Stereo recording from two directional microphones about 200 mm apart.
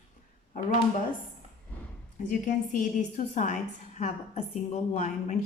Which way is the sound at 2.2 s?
40° left (ahead or behind).